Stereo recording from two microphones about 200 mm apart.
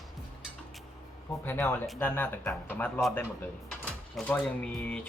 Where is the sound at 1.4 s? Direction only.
10° left (ahead or behind).